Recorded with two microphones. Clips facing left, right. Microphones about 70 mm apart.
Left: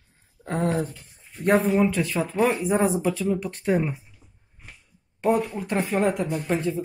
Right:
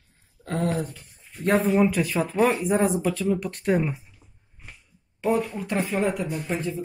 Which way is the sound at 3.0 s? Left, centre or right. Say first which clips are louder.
Left 1 dB; centre.